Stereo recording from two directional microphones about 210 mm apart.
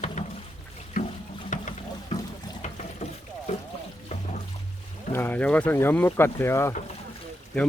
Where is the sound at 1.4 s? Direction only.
35° left (ahead or behind).